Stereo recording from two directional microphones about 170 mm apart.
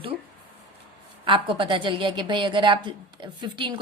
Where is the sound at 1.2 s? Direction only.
30° right (ahead or behind).